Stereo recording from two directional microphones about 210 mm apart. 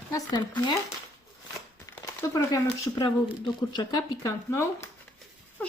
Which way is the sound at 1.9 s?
15° left (ahead or behind).